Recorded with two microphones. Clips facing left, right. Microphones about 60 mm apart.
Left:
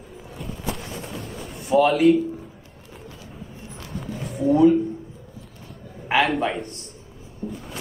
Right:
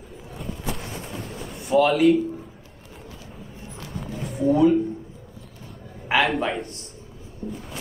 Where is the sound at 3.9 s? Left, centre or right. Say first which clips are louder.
Left 1 dB; centre.